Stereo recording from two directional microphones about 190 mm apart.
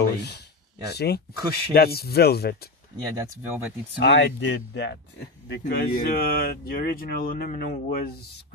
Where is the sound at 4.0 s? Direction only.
65° left (ahead or behind).